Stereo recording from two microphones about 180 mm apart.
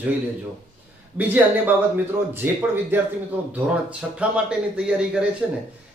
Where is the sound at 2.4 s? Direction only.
10° right (ahead or behind).